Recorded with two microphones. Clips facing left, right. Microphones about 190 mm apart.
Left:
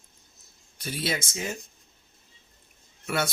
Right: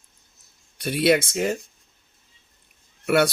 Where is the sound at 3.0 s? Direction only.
70° right (ahead or behind).